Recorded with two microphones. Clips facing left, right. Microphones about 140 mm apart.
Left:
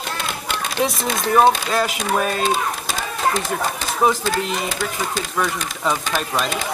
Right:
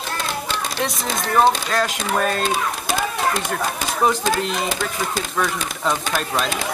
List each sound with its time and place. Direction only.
0.8 s speech: centre (ahead or behind)
4.0 s speech: centre (ahead or behind)